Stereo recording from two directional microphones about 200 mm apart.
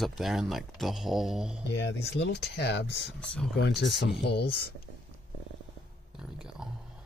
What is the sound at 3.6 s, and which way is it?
Speech, 55° left (ahead or behind).